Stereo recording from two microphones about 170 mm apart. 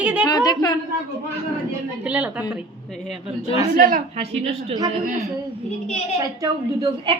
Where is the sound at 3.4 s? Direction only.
35° left (ahead or behind).